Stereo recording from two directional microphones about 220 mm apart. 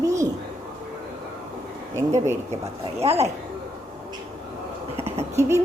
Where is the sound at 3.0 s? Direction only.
25° right (ahead or behind).